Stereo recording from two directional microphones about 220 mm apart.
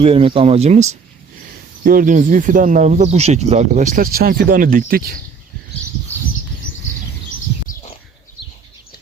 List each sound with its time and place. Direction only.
0.0 s speech: 25° right (ahead or behind); by 5.1 s 40° right (ahead or behind)